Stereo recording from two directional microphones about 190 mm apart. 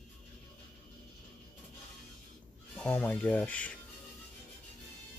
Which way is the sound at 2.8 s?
5° left (ahead or behind).